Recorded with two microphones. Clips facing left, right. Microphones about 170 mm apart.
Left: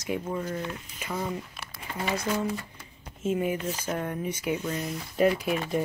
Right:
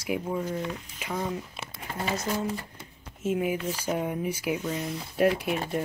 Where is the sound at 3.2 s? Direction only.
5° right (ahead or behind).